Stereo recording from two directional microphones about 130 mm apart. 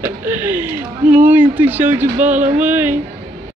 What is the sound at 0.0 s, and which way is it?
Speech, 15° right (ahead or behind).